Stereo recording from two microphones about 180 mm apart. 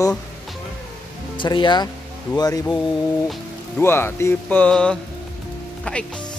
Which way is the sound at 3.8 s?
15° left (ahead or behind).